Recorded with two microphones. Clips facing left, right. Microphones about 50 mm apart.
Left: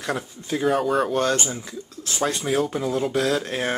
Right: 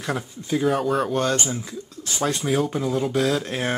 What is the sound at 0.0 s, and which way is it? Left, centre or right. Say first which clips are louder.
Speech: even; centre.